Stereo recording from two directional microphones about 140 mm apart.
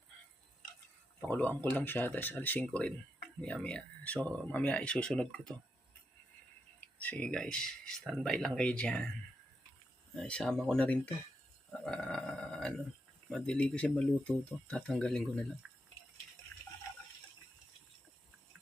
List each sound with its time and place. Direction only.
1.3 s speech: 10° left (ahead or behind)
6.7 s speech: 10° left (ahead or behind)
10.2 s speech: 5° left (ahead or behind)
15.6 s drip: 5° right (ahead or behind)